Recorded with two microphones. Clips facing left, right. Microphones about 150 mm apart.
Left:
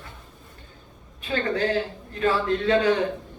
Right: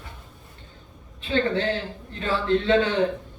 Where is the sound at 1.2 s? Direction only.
30° right (ahead or behind).